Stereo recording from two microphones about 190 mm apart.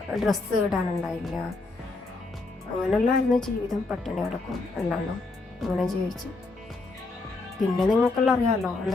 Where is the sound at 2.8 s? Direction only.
Centre (ahead or behind).